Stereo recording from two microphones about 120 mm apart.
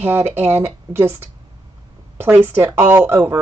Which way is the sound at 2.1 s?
20° right (ahead or behind).